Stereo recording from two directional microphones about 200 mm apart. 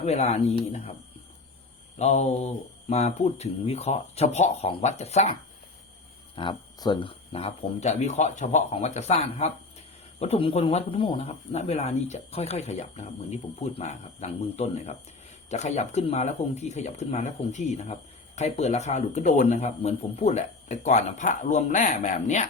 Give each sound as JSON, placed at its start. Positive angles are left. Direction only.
{"t": 0.0, "sound": "speech", "side_deg": 30}
{"t": 2.0, "sound": "speech", "side_deg": 35}
{"t": 6.3, "sound": "speech", "side_deg": 25}